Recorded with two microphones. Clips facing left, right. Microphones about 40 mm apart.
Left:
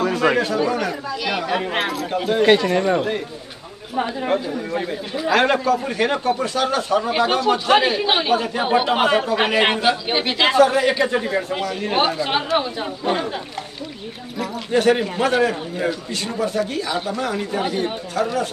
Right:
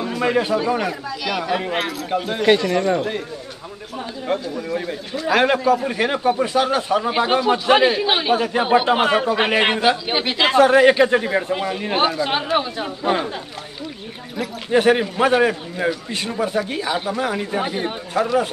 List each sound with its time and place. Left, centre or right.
0.1 s chatter: left
0.7 s speech: centre
1.1 s speech: centre
1.4 s speech: centre
4.3 s speech: centre
5.3 s speech: centre
8.3 s speech: centre
8.6 s speech: centre
10.6 s speech: right
11.1 s speech: centre
12.2 s speech: centre
14.7 s a man's voice: centre